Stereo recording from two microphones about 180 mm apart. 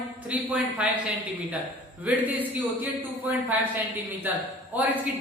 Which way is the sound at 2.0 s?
10° right (ahead or behind).